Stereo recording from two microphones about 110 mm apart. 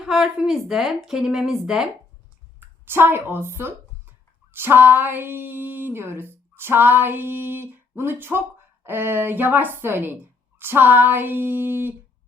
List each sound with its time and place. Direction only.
0.0 s speech: 5° right (ahead or behind)
2.6 s speech: 20° right (ahead or behind)